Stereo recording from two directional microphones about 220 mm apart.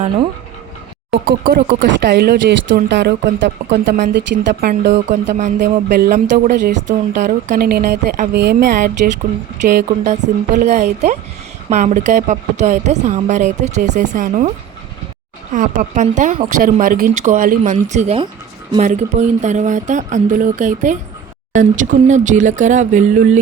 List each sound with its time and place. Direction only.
1.1 s a woman's voice: 45° right (ahead or behind)
8.3 s a woman's voice: 50° right (ahead or behind)
15.5 s a woman's voice: 35° right (ahead or behind)